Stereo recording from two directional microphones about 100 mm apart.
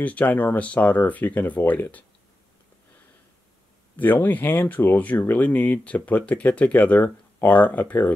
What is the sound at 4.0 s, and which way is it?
Speech, 20° left (ahead or behind).